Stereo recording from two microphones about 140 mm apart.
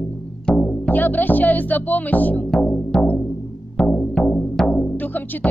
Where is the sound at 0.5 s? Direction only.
10° left (ahead or behind).